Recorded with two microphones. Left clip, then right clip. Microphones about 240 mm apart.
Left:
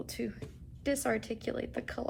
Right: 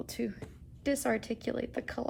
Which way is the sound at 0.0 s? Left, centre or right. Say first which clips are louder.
Right 1 dB; right.